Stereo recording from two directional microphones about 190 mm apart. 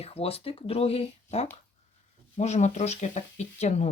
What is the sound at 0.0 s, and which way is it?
Speech, 30° left (ahead or behind).